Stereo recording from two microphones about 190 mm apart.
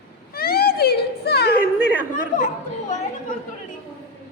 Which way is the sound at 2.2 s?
45° left (ahead or behind).